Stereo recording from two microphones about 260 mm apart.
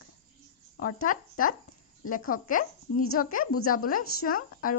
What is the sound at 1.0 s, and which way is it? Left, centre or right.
Speech, left.